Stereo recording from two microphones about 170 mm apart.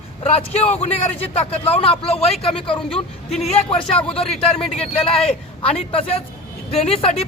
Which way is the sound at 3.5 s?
30° left (ahead or behind).